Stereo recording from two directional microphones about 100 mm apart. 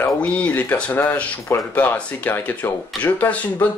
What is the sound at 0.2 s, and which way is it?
Speech, 15° left (ahead or behind).